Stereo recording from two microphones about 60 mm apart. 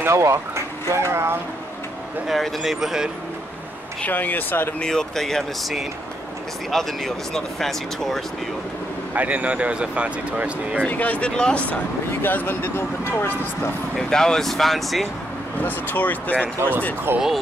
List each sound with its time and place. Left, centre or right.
0.0 s speech: right
2.2 s speech: centre
4.0 s speech: left
4.7 s speech: centre
9.1 s speech: right
10.9 s speech: left
11.3 s speech: centre
12.2 s speech: left
13.9 s speech: centre
15.6 s speech: left
17.1 s speech: right